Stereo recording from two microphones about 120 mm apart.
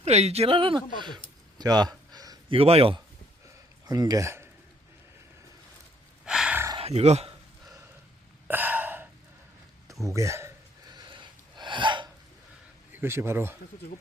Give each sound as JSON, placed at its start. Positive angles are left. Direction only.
{"t": 0.0, "sound": "speech", "side_deg": -65}
{"t": 1.5, "sound": "a sound", "side_deg": -35}
{"t": 2.5, "sound": "speech", "side_deg": -55}
{"t": 3.8, "sound": "speech", "side_deg": -35}
{"t": 6.2, "sound": "a sound", "side_deg": -5}
{"t": 6.7, "sound": "a sound", "side_deg": -60}
{"t": 8.4, "sound": "hiccup", "side_deg": -15}
{"t": 9.8, "sound": "speech", "side_deg": -25}
{"t": 10.8, "sound": "gasp", "side_deg": -40}
{"t": 12.9, "sound": "speech", "side_deg": -20}